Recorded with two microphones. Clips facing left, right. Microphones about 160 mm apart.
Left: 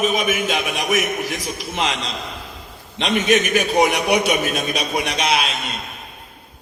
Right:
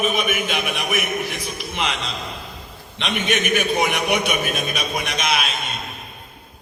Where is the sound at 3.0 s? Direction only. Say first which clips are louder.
Left 5 dB; 40° left (ahead or behind).